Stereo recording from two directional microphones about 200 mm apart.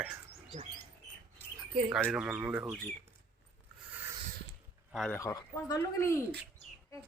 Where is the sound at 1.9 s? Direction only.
5° right (ahead or behind).